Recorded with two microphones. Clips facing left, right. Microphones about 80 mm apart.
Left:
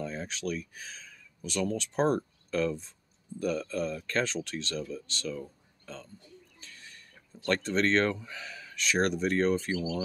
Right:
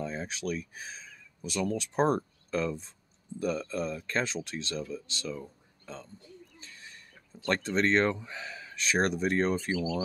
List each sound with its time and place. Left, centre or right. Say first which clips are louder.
0.0 s speech: even; right